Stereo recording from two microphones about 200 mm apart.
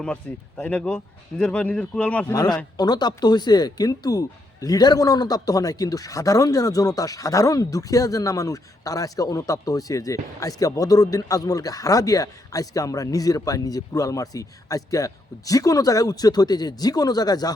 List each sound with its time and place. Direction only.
0.0 s speech: 5° left (ahead or behind)
2.3 s speech: 20° left (ahead or behind)